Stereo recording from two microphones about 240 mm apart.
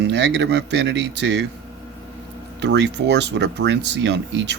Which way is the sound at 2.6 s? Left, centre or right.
Right.